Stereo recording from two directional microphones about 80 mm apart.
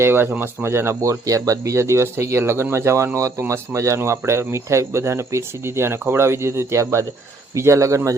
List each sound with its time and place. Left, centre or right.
0.0 s speech: right